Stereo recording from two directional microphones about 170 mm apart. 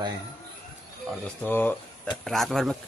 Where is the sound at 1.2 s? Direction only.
10° left (ahead or behind).